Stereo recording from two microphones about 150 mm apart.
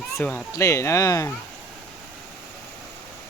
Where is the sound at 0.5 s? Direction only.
20° left (ahead or behind).